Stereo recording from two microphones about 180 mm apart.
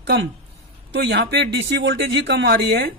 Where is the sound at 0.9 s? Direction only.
70° right (ahead or behind).